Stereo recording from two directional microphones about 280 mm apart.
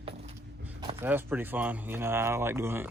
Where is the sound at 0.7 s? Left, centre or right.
Centre.